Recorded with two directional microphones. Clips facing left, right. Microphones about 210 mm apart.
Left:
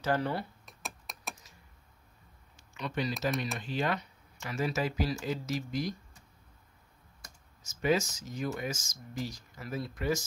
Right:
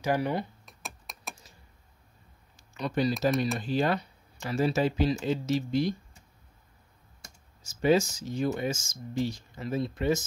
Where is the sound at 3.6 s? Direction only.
35° right (ahead or behind).